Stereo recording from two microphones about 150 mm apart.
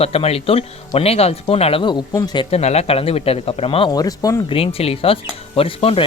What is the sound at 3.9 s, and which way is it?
Speech, 25° left (ahead or behind).